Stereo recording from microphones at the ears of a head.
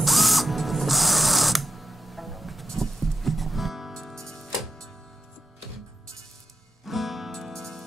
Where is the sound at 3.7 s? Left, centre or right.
Centre.